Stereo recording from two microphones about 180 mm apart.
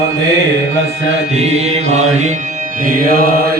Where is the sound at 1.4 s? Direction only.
35° right (ahead or behind).